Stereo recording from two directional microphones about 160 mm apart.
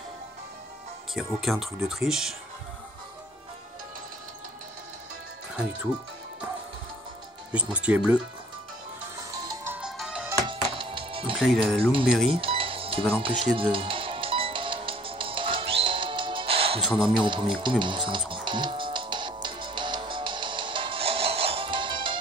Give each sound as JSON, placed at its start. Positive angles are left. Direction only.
{"t": 1.1, "sound": "speech", "side_deg": 0}
{"t": 7.5, "sound": "speech", "side_deg": -10}
{"t": 9.8, "sound": "music", "side_deg": -5}
{"t": 10.5, "sound": "music", "side_deg": -35}
{"t": 11.3, "sound": "speech", "side_deg": 0}
{"t": 12.3, "sound": "a sound", "side_deg": -35}
{"t": 13.2, "sound": "speech", "side_deg": -30}
{"t": 13.6, "sound": "music", "side_deg": -35}